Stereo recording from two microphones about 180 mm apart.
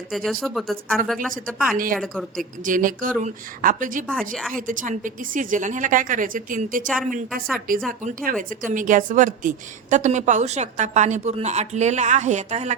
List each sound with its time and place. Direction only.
0.1 s speech: centre (ahead or behind)
1.7 s a woman's voice: 50° right (ahead or behind)
2.0 s speech: centre (ahead or behind)
2.4 s a woman's voice: 50° right (ahead or behind)
4.0 s speech: 5° left (ahead or behind)
4.5 s a woman's voice: 45° right (ahead or behind)
7.9 s a woman's voice: 50° right (ahead or behind)